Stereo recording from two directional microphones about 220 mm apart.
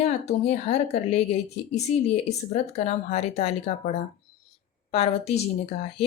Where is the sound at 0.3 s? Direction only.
30° left (ahead or behind).